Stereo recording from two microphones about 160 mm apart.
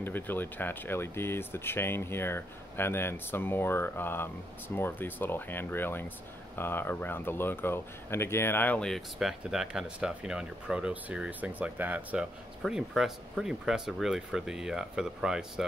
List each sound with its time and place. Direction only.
0.0 s speech: 10° left (ahead or behind); by 15.6 s 5° right (ahead or behind)